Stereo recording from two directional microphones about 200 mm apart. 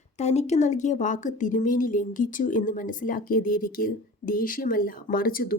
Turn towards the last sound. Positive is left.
turn(degrees=45)  # may be behind; listen again after turning